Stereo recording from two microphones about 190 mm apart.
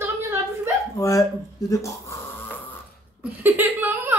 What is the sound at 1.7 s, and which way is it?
Snoring, 15° left (ahead or behind).